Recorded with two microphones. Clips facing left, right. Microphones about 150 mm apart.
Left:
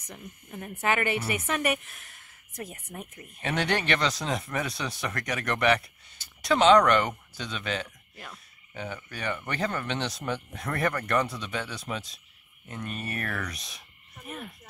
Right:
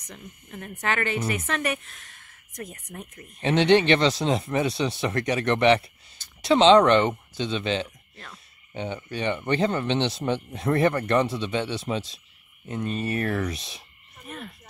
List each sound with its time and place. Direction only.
0.0 s speech: 15° left (ahead or behind)
2.5 s speech: 25° left (ahead or behind)
3.3 s speech: 25° right (ahead or behind)